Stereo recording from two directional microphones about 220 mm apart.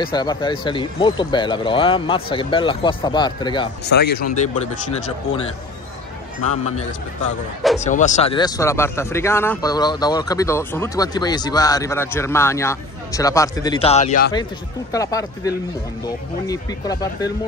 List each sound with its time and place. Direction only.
0.0 s speech: 20° left (ahead or behind)
3.8 s speech: 50° left (ahead or behind)
6.6 s a man's voice: 30° left (ahead or behind)
14.9 s speech: 15° left (ahead or behind)